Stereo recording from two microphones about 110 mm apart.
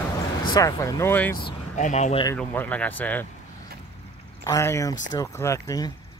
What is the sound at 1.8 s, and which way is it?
Speech, 90° left.